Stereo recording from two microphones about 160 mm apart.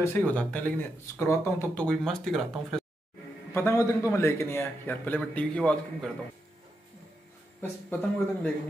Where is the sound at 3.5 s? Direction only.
15° left (ahead or behind).